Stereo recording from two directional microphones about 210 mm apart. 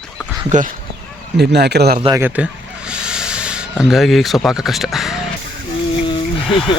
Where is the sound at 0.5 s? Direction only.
35° right (ahead or behind).